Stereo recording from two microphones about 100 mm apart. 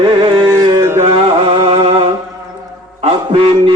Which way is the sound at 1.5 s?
60° right (ahead or behind).